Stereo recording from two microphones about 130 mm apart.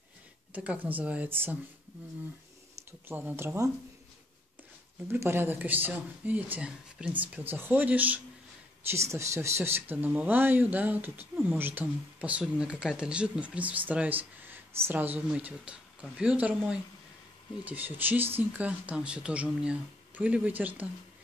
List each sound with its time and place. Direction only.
0.5 s speech: 10° right (ahead or behind)
3.1 s speech: 15° right (ahead or behind)
5.0 s speech: 20° right (ahead or behind)